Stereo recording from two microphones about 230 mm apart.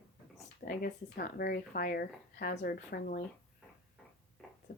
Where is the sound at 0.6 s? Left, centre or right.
Left.